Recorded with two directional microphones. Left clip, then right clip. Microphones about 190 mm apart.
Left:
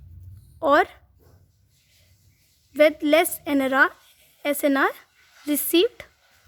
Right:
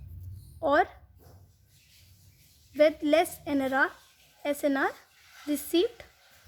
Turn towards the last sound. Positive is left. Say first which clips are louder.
# left 7 dB
turn(degrees=35)  # may be behind; listen again after turning